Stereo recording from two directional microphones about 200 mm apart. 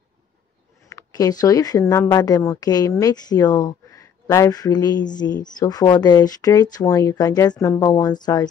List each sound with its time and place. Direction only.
0.8 s speech: 15° left (ahead or behind)